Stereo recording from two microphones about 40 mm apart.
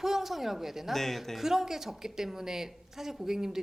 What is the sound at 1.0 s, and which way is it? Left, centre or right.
Speech, centre.